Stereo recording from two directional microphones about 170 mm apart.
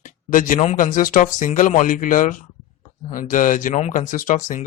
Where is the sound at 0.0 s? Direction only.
50° left (ahead or behind).